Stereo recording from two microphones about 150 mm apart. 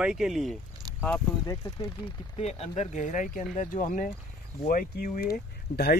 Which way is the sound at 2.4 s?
45° left (ahead or behind).